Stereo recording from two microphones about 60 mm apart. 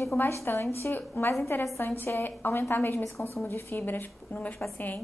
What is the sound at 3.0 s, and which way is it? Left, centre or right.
Speech, left.